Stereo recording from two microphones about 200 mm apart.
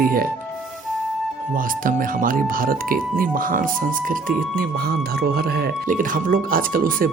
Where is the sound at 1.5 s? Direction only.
45° right (ahead or behind).